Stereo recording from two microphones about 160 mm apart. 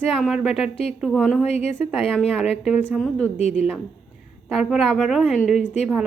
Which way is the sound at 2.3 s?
Centre (ahead or behind).